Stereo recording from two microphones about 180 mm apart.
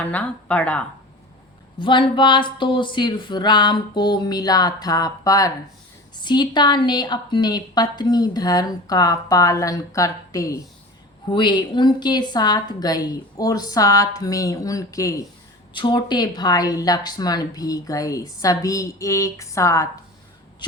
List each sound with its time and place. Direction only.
0.0 s speech: 10° left (ahead or behind)
1.8 s a woman's voice: 25° left (ahead or behind)